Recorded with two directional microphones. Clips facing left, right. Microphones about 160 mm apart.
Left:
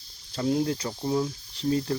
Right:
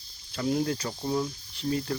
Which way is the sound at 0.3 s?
25° left (ahead or behind).